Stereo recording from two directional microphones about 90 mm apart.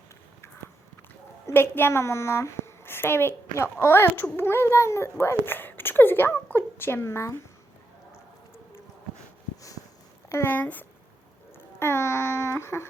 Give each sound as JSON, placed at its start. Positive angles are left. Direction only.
{"t": 1.5, "sound": "a woman's voice", "side_deg": 25}
{"t": 9.6, "sound": "a sound", "side_deg": 40}
{"t": 10.2, "sound": "speech", "side_deg": 30}
{"t": 10.5, "sound": "babbling", "side_deg": 20}